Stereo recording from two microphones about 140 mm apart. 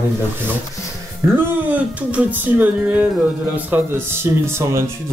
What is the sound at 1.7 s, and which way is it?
Music, 10° right (ahead or behind).